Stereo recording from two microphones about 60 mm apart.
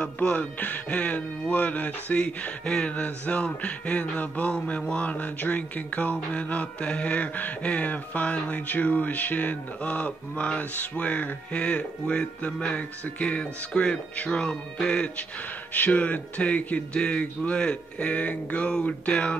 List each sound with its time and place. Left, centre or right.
0.0 s speech: centre